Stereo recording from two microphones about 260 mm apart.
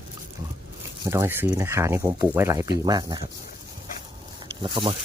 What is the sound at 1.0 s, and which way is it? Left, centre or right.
Speech, centre.